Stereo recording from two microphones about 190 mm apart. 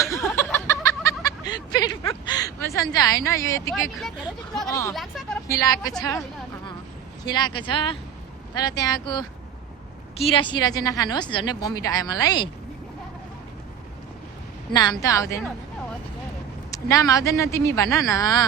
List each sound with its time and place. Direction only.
0.0 s a sound: 15° left (ahead or behind)
4.7 s speech: 15° left (ahead or behind)
4.9 s speech: centre (ahead or behind)
5.5 s a woman's voice: 20° left (ahead or behind)
7.3 s a woman's voice: 20° left (ahead or behind)
14.7 s a woman's voice: 20° left (ahead or behind)
16.7 s speech: 15° left (ahead or behind)